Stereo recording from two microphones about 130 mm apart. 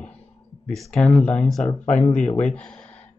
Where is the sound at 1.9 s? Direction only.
60° left (ahead or behind).